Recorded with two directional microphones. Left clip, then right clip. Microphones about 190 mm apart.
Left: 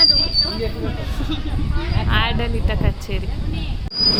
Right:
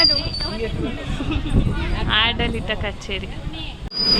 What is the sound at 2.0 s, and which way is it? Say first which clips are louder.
Speech: right 3 dB; 10° left (ahead or behind).